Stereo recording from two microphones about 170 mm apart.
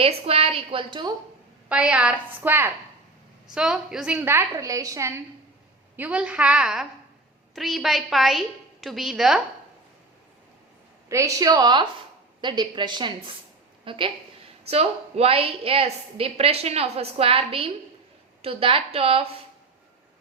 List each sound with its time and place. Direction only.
0.0 s a woman's voice: 35° right (ahead or behind)
1.7 s a woman's voice: 5° right (ahead or behind)
11.1 s a woman's voice: 20° right (ahead or behind); by 19.2 s 35° right (ahead or behind)